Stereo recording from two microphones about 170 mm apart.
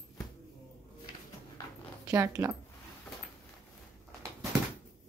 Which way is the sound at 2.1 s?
20° right (ahead or behind).